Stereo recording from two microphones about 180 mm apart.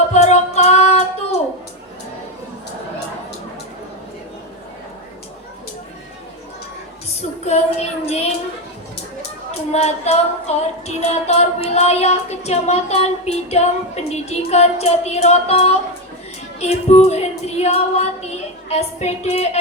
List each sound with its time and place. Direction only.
0.1 s music: 40° left (ahead or behind)
7.2 s child singing: 35° left (ahead or behind)
9.7 s child singing: 35° left (ahead or behind)
16.6 s female singing: 35° left (ahead or behind)